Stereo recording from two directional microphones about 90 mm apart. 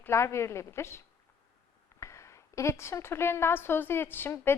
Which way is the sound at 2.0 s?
35° left (ahead or behind).